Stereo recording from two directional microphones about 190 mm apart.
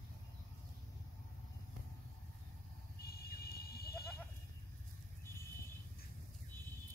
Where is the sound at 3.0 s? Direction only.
55° left (ahead or behind).